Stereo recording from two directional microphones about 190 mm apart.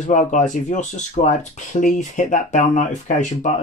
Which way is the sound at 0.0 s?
40° left (ahead or behind).